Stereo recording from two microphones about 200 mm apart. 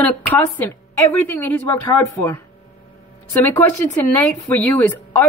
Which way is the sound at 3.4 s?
10° left (ahead or behind).